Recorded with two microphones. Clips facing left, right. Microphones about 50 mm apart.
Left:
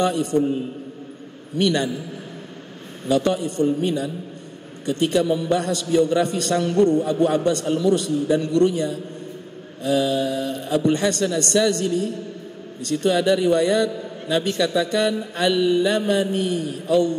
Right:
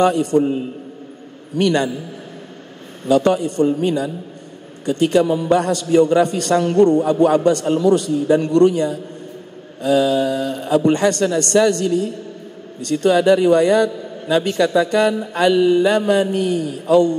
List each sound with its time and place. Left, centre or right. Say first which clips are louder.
0.0 s a man's voice: right 5 dB; right
1.6 s a man's voice: right 4 dB; right
3.1 s a man's voice: right 5 dB; right
12.9 s a man's voice: right 5 dB; right
16.6 s speech: right 6 dB; right